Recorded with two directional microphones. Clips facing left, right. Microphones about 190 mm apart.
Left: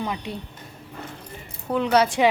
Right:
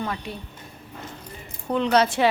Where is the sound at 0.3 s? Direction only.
20° left (ahead or behind).